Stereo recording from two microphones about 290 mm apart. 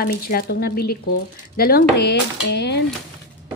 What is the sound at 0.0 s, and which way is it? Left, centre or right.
Speech, left.